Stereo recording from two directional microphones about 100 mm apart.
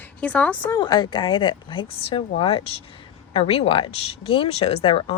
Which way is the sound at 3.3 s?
75° left (ahead or behind).